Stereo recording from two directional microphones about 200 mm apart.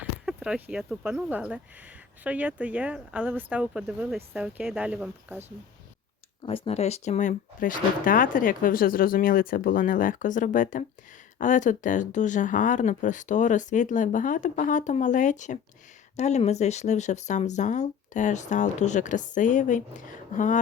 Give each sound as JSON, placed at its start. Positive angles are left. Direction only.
{"t": 0.0, "sound": "speech", "side_deg": -5}
{"t": 6.4, "sound": "speech", "side_deg": 30}